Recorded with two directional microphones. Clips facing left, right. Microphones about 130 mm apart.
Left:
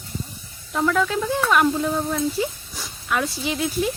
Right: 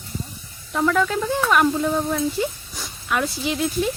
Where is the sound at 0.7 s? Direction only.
Centre (ahead or behind).